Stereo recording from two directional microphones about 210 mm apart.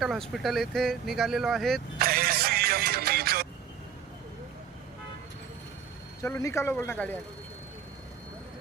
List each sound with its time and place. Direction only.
0.0 s speech: centre (ahead or behind)
2.0 s music: 45° right (ahead or behind)
6.2 s speech: 10° left (ahead or behind)